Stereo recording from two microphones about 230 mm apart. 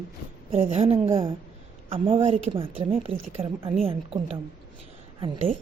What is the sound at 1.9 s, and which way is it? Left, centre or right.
Speech, right.